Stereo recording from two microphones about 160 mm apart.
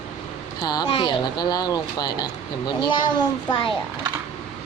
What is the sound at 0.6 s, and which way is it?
Speech, 25° left (ahead or behind).